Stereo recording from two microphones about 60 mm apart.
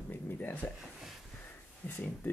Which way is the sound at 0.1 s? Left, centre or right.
Left.